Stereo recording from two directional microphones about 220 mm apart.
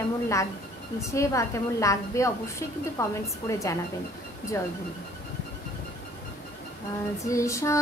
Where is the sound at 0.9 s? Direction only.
15° left (ahead or behind).